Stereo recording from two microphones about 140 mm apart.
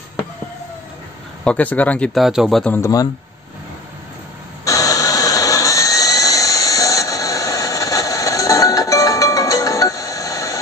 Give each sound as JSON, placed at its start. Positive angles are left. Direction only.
{"t": 1.4, "sound": "speech", "side_deg": 10}
{"t": 2.1, "sound": "speech", "side_deg": 0}
{"t": 2.6, "sound": "speech", "side_deg": 15}
{"t": 4.6, "sound": "jet engine", "side_deg": 25}